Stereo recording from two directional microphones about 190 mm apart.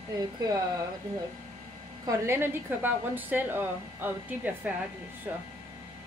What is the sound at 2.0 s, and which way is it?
A woman's voice, 15° right (ahead or behind).